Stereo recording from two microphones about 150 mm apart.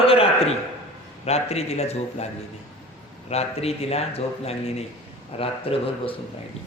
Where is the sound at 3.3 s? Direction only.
45° left (ahead or behind).